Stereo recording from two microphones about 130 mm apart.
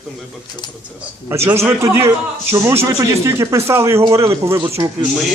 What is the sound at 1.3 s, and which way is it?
A man's voice, 20° right (ahead or behind).